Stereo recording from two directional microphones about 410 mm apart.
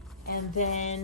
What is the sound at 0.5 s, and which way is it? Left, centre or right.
Speech, centre.